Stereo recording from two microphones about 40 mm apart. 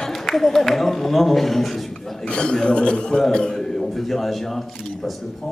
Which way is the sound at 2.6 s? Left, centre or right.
Left.